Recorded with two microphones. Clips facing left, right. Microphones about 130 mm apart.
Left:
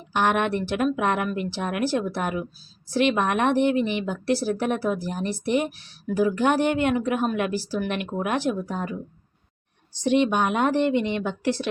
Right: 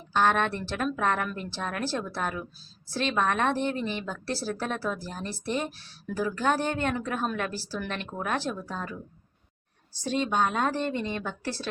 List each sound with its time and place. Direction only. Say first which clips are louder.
0.1 s speech: left 2 dB; 15° left (ahead or behind)
3.8 s speech: left 7 dB; 70° left (ahead or behind)
4.1 s speech: left 8 dB; 15° left (ahead or behind)
10.4 s speech: left 5 dB; 20° left (ahead or behind)
10.8 s speech: left 8 dB; 70° left (ahead or behind)
11.1 s speech: left 8 dB; 20° left (ahead or behind)